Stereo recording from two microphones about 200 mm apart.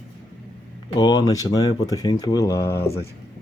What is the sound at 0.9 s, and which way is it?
Speech, 20° left (ahead or behind).